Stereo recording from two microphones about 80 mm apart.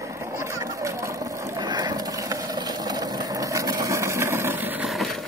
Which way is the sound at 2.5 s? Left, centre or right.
Right.